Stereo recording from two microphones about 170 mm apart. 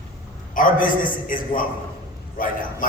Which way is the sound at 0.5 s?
55° left (ahead or behind).